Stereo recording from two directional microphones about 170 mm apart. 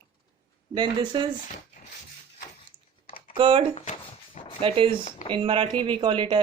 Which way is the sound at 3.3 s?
30° right (ahead or behind).